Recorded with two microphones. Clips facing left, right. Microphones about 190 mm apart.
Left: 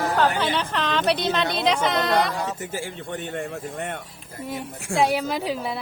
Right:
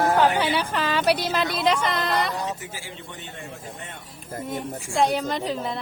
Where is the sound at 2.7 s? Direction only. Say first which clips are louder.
Left 8 dB; 55° left (ahead or behind).